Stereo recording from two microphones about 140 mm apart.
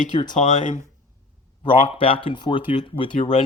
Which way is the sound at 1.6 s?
40° left (ahead or behind).